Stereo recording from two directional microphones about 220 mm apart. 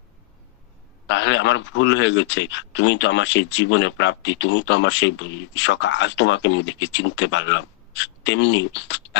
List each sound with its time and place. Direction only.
1.0 s speech: 55° left (ahead or behind)